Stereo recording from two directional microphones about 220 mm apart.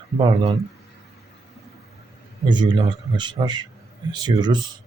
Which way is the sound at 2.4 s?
20° right (ahead or behind).